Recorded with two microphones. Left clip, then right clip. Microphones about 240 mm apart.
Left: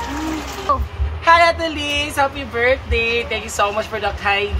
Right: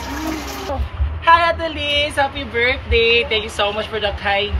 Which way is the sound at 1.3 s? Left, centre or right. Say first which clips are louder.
Left 1 dB; centre.